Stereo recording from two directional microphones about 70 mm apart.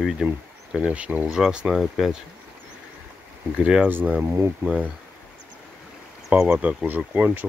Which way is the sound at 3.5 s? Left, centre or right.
Centre.